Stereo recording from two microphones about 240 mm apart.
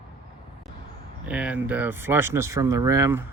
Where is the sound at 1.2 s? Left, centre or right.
Centre.